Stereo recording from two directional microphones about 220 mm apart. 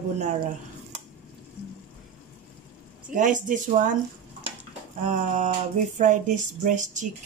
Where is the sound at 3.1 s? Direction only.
35° right (ahead or behind).